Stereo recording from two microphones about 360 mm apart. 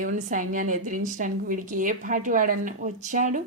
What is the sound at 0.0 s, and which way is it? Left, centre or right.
A woman's voice, right.